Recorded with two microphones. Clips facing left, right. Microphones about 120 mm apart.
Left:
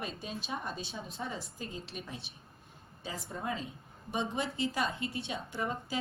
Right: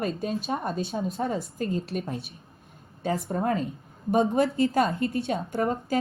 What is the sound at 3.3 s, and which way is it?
A woman's voice, 55° right (ahead or behind).